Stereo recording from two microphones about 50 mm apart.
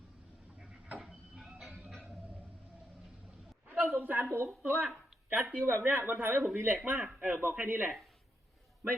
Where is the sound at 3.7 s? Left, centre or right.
Right.